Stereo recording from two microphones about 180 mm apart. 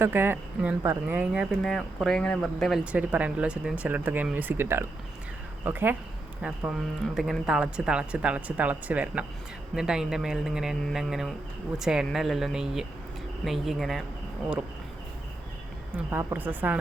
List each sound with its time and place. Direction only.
0.0 s speech: 10° right (ahead or behind)
16.0 s speech: 10° right (ahead or behind)